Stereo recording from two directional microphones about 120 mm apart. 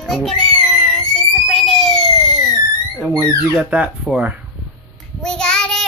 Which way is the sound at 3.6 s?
10° right (ahead or behind).